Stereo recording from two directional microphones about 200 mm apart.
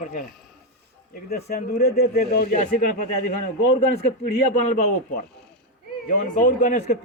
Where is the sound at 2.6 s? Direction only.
40° left (ahead or behind).